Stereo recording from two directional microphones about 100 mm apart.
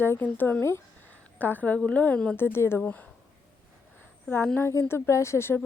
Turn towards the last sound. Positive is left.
turn(degrees=25)  # may be behind; listen again after turning